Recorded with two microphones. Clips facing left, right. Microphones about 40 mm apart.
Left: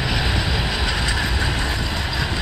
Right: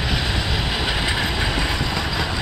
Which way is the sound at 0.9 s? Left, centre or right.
Centre.